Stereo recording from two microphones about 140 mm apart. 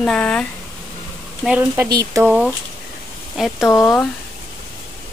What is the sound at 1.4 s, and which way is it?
Speech, 10° right (ahead or behind).